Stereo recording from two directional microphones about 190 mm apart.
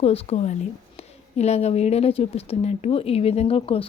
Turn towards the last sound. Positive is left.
turn(degrees=30)  # may be behind; listen again after turning